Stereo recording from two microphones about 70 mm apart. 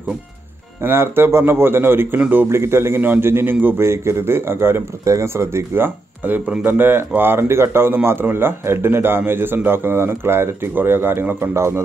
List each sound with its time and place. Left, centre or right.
0.8 s speech: right
2.1 s speech: right
2.5 s speech: right
6.2 s speech: right
11.5 s a man's voice: right